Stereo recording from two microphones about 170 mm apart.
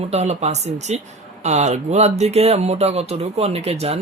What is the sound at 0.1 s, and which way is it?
Speech, 40° right (ahead or behind).